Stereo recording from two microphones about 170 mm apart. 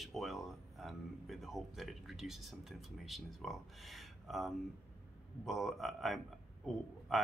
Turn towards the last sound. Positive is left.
turn(degrees=0)  # may be behind; listen again after turning